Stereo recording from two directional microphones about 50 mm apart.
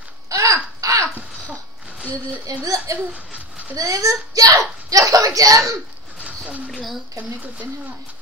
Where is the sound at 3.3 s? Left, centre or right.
Right.